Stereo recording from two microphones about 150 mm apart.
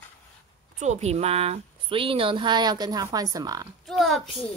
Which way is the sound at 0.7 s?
50° right (ahead or behind).